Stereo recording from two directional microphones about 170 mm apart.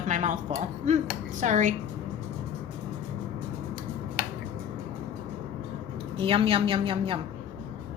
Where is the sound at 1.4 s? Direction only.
45° right (ahead or behind).